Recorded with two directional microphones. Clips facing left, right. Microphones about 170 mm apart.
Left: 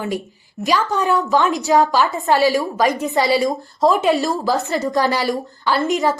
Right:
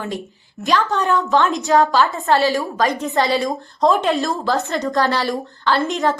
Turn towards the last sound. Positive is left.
turn(degrees=0)  # may be behind; listen again after turning